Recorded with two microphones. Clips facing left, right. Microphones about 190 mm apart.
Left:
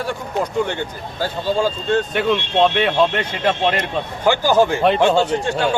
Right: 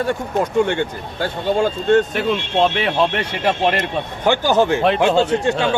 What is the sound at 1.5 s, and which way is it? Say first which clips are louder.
Speech: right 3 dB; 60° right (ahead or behind).